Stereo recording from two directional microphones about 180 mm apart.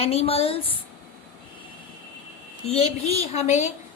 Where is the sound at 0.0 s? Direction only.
35° left (ahead or behind).